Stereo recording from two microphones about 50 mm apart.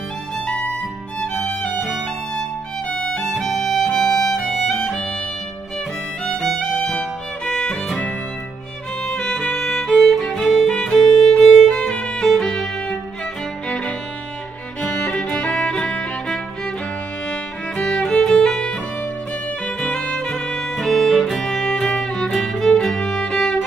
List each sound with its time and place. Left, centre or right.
0.5 s music: left
2.9 s music: centre
3.3 s music: centre
6.2 s music: centre
7.4 s music: centre
9.1 s music: centre
15.2 s music: centre
18.2 s music: centre
19.8 s music: centre
20.7 s music: centre
22.9 s music: centre